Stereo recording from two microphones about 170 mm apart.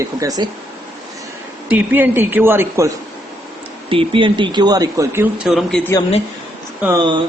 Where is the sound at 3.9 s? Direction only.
30° right (ahead or behind).